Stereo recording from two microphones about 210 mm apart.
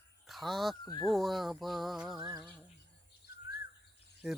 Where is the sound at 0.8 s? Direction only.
15° left (ahead or behind).